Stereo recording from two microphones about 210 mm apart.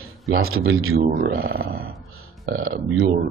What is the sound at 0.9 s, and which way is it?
Speech, 45° right (ahead or behind).